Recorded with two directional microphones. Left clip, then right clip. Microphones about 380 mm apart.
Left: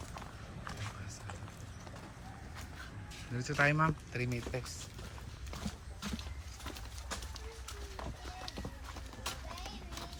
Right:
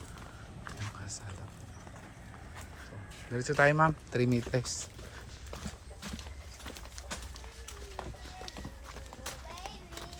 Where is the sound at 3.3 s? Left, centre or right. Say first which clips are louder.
Right 5 dB; centre.